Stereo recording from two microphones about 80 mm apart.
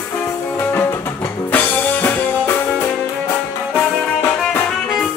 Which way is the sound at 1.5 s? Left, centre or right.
Left.